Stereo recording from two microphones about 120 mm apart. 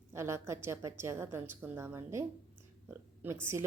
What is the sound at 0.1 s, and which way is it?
A woman's voice, 25° right (ahead or behind).